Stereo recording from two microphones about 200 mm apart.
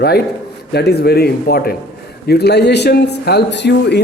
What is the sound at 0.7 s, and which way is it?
A man's voice, 55° left (ahead or behind).